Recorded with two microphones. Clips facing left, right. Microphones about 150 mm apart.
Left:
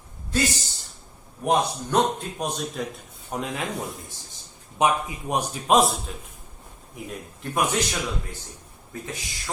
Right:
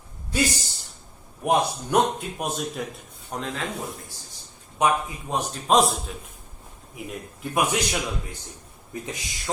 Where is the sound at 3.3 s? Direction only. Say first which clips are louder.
Left 1 dB; 10° left (ahead or behind).